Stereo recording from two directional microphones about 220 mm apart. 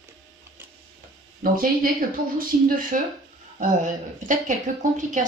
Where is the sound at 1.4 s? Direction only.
40° right (ahead or behind).